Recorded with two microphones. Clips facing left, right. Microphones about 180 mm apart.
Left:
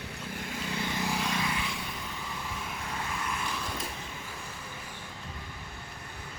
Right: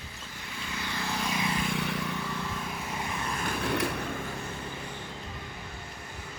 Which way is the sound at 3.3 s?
60° right (ahead or behind).